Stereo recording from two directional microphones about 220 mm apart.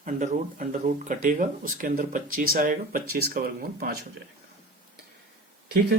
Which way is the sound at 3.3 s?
40° right (ahead or behind).